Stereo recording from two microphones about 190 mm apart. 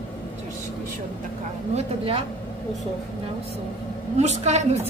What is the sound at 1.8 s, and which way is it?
Speech, 30° right (ahead or behind).